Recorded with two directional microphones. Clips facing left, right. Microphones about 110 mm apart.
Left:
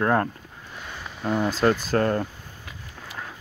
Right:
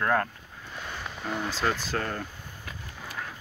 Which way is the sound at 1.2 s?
45° left (ahead or behind).